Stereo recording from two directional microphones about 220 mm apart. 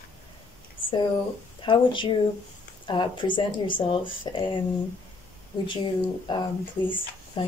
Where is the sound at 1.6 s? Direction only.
20° left (ahead or behind).